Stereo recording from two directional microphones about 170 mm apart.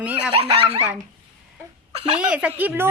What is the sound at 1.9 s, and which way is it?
Speech, 35° right (ahead or behind).